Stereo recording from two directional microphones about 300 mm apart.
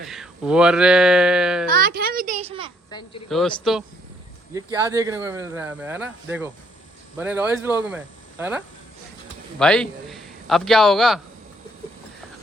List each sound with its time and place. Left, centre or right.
0.0 s speech: centre
1.7 s a sound: right
3.2 s speech: centre
4.5 s a man's voice: centre